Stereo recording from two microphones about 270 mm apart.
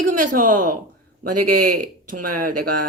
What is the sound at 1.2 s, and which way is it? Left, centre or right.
Speech, right.